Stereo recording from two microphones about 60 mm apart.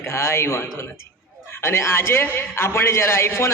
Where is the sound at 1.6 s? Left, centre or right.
Left.